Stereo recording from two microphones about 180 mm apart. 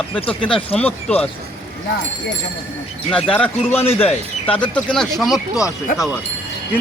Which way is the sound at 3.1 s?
5° left (ahead or behind).